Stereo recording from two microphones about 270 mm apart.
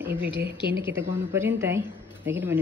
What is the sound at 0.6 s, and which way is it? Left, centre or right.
Speech, right.